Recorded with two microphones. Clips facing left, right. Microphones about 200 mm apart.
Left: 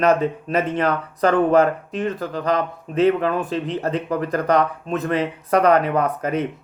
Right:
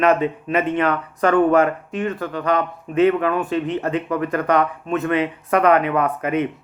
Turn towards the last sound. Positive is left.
turn(degrees=40)  # may be behind; listen again after turning